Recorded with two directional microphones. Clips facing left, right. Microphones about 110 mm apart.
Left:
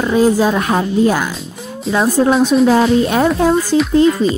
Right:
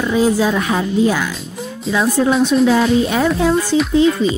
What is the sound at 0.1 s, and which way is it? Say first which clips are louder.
Speech: left 3 dB; 45° left (ahead or behind).